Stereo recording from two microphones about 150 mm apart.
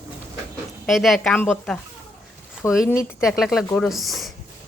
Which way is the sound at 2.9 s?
20° left (ahead or behind).